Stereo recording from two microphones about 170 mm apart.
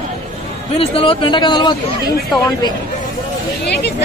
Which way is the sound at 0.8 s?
35° left (ahead or behind).